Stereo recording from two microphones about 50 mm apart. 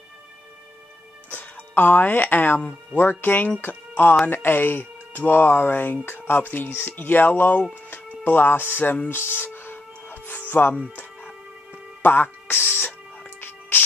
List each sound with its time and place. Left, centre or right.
1.3 s speech: left
9.1 s music: left
10.5 s speech: left
12.0 s speech: left
13.4 s music: left